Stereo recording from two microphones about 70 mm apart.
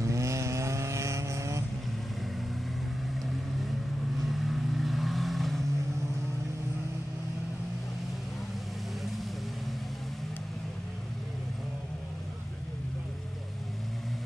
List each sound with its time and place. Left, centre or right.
0.0 s vehicle: right
4.2 s vehicle: centre